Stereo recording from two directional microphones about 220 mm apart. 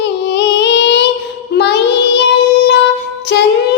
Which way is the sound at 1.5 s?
50° left (ahead or behind).